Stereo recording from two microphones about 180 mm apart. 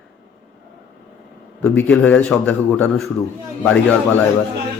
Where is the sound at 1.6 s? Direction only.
10° left (ahead or behind).